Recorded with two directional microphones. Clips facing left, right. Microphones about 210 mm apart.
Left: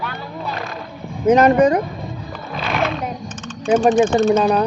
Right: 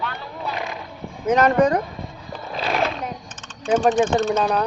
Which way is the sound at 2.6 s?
35° right (ahead or behind).